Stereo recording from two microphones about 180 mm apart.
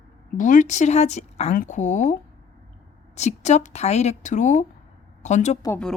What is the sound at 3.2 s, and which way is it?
Speech, 40° left (ahead or behind).